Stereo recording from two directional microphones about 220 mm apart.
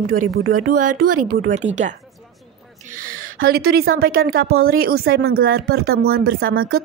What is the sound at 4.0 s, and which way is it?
Speech, 45° right (ahead or behind).